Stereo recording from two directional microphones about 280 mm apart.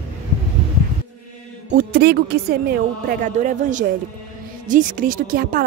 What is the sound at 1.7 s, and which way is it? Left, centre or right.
A woman's voice, right.